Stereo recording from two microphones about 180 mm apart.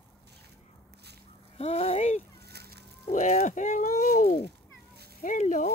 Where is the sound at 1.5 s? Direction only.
35° left (ahead or behind).